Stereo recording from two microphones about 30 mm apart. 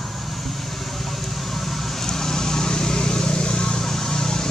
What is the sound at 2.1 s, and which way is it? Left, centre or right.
Vehicle, centre.